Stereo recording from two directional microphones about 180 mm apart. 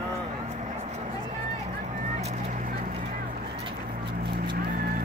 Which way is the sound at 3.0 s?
45° right (ahead or behind).